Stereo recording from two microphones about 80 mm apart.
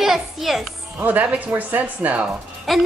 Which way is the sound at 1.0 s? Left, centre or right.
Right.